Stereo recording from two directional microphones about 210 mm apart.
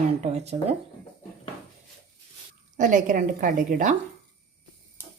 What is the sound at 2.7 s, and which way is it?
A woman's voice, 35° right (ahead or behind).